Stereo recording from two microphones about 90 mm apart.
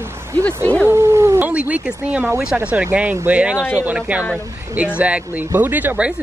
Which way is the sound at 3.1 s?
25° right (ahead or behind).